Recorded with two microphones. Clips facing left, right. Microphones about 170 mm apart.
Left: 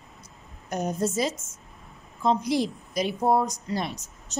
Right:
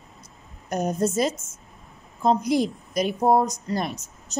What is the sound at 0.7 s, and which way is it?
A woman's voice, 45° right (ahead or behind).